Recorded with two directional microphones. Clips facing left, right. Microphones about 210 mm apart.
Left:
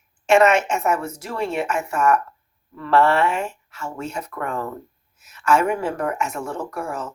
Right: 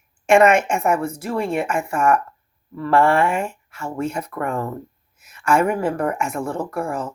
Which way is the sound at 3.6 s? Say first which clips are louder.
Right 2 dB; 10° right (ahead or behind).